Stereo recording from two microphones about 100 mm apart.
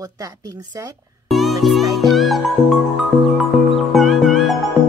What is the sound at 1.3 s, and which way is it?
Music, centre (ahead or behind).